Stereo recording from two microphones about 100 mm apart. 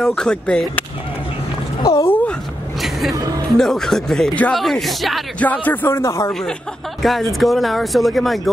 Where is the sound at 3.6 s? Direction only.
5° left (ahead or behind).